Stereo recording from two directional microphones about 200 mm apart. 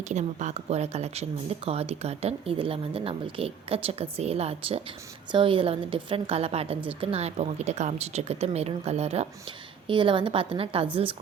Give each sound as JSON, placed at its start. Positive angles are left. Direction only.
{"t": 0.0, "sound": "a woman's voice", "side_deg": -35}